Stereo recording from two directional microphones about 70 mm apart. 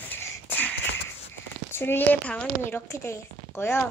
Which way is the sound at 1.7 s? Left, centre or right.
Left.